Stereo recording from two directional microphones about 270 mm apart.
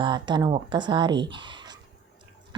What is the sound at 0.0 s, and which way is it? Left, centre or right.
Speech, centre.